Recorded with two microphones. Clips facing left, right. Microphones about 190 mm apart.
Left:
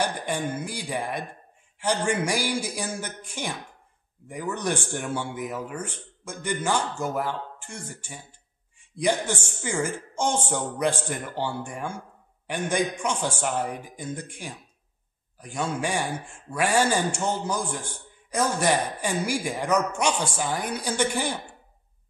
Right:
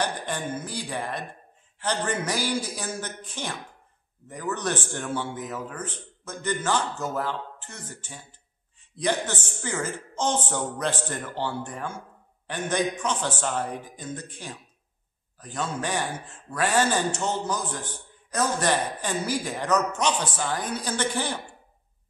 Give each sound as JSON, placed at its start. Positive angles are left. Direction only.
{"t": 0.0, "sound": "speech", "side_deg": 10}